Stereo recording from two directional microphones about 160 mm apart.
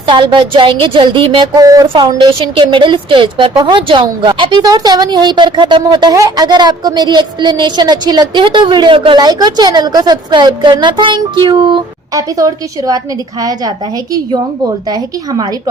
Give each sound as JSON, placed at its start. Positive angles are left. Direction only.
{"t": 0.1, "sound": "a woman's voice", "side_deg": -30}
{"t": 1.6, "sound": "a woman's voice", "side_deg": -20}